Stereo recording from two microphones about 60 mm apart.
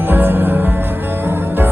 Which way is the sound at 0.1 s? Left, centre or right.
Right.